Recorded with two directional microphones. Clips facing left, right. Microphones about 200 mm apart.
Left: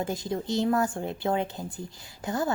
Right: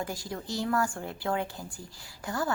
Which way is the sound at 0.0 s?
20° left (ahead or behind).